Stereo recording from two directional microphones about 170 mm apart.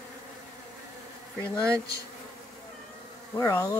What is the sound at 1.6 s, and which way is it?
Bee, 20° right (ahead or behind).